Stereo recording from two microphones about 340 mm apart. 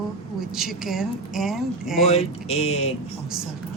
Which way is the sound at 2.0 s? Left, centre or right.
Centre.